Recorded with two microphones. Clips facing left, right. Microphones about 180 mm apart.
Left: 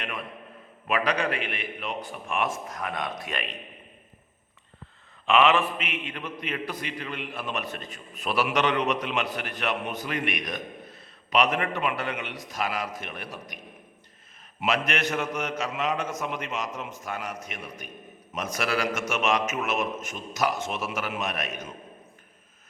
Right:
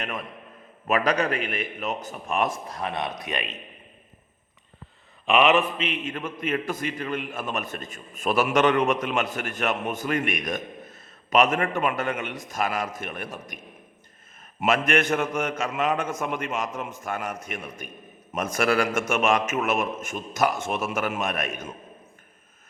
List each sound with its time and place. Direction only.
0.9 s a man's voice: 45° right (ahead or behind); by 3.6 s 20° right (ahead or behind)
5.2 s a man's voice: 15° right (ahead or behind); by 13.6 s 50° right (ahead or behind)
14.6 s a man's voice: 50° right (ahead or behind)